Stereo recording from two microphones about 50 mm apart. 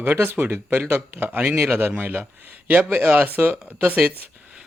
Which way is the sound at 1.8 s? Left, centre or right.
Right.